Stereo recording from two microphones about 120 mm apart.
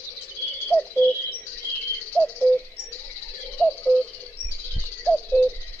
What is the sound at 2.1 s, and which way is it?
Bird, 5° left (ahead or behind).